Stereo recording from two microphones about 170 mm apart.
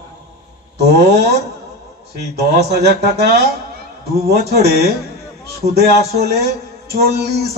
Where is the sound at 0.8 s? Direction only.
75° right (ahead or behind).